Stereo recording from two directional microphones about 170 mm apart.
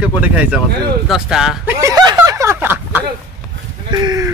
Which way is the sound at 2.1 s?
15° right (ahead or behind).